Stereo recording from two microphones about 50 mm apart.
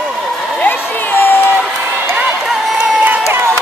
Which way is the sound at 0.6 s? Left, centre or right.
Left.